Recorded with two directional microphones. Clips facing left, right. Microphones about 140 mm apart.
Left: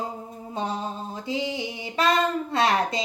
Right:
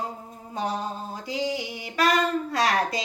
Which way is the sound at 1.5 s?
25° left (ahead or behind).